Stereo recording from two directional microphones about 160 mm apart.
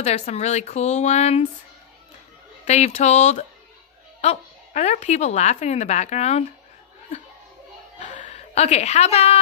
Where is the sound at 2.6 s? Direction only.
45° left (ahead or behind).